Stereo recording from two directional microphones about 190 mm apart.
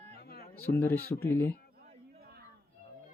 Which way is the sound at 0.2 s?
55° left (ahead or behind).